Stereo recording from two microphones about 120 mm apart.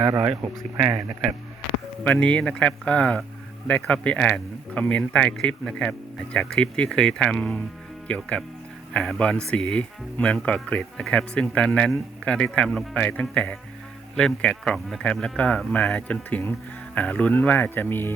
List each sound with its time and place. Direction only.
0.0 s speech: 25° right (ahead or behind)
2.0 s speech: 10° left (ahead or behind)